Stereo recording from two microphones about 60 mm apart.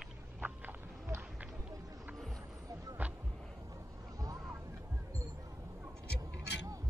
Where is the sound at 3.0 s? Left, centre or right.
Right.